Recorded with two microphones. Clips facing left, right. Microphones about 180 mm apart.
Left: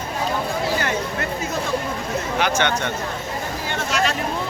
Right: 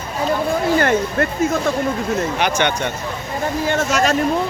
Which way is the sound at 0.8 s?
55° right (ahead or behind).